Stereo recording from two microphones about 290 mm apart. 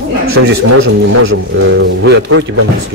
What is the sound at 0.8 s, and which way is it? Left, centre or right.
A man's voice, right.